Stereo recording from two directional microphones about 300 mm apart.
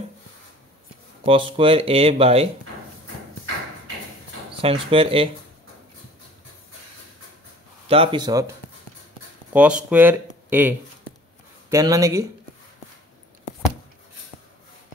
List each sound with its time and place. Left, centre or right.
1.2 s speech: centre
4.6 s speech: centre
7.9 s speech: centre
9.5 s speech: centre
11.7 s speech: centre